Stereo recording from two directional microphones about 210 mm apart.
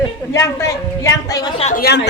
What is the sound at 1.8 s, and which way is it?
Speech, 55° left (ahead or behind).